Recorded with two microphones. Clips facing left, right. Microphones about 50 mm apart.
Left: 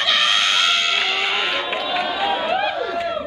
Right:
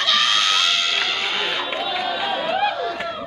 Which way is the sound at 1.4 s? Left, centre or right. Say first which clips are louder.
Left 1 dB; centre.